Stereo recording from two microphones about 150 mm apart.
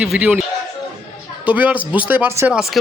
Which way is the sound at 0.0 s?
5° right (ahead or behind).